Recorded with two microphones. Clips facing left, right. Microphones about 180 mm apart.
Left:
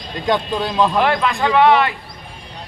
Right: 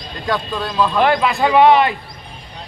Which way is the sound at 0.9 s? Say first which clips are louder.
Right 2 dB; centre (ahead or behind).